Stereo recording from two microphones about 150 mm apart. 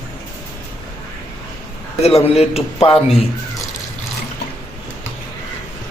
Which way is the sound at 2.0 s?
45° left (ahead or behind).